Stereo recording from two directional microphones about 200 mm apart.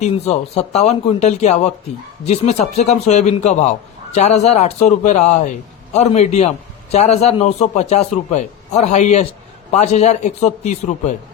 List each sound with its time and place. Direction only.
0.0 s a man's voice: 30° left (ahead or behind)